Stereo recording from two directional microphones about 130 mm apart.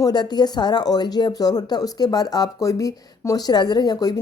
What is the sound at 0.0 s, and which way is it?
Speech, 35° left (ahead or behind).